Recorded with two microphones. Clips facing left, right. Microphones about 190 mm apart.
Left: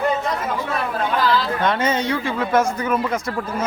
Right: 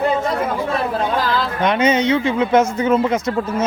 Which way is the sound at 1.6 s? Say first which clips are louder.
Right 8 dB; 20° right (ahead or behind).